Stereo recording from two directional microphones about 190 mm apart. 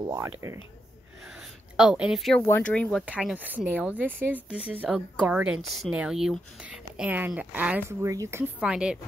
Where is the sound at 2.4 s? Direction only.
10° left (ahead or behind).